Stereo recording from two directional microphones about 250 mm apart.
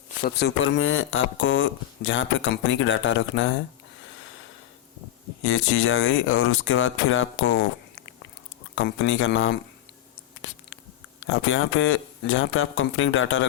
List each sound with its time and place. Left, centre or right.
0.2 s speech: left
5.5 s speech: left
8.7 s speech: left
11.3 s speech: left